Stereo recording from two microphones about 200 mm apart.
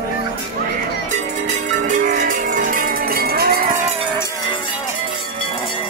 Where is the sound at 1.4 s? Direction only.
40° right (ahead or behind).